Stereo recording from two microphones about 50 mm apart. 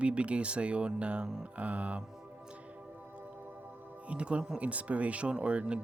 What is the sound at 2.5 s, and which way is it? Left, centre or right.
Music, right.